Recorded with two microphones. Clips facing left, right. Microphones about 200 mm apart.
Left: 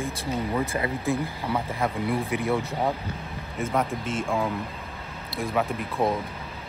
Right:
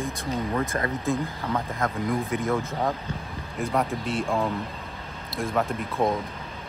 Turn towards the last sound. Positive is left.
turn(degrees=0)  # may be behind; listen again after turning